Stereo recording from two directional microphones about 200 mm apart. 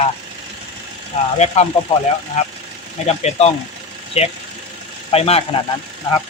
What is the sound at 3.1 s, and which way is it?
Speech, 35° left (ahead or behind).